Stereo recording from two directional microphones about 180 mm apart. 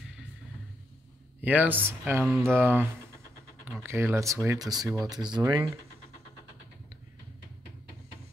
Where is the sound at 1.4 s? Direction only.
10° right (ahead or behind).